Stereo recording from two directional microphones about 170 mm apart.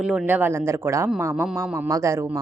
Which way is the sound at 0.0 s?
5° right (ahead or behind).